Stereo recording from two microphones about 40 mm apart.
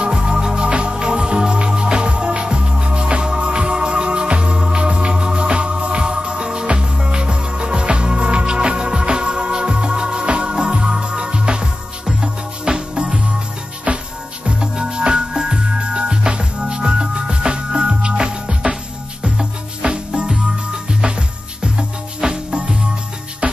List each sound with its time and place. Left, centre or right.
0.0 s music: right